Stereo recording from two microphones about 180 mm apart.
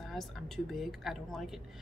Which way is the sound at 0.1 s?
Centre (ahead or behind).